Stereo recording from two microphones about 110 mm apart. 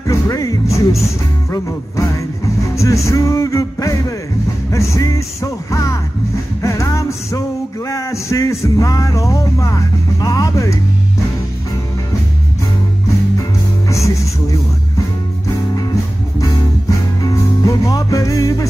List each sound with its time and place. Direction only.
0.0 s music: 30° left (ahead or behind)
13.4 s music: 30° left (ahead or behind)
17.2 s music: 30° left (ahead or behind)